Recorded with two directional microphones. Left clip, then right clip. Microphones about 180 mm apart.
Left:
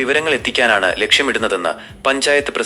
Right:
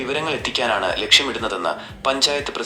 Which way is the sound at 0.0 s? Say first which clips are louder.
Left 7 dB; 25° left (ahead or behind).